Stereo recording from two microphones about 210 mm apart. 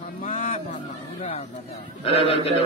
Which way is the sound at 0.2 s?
40° left (ahead or behind).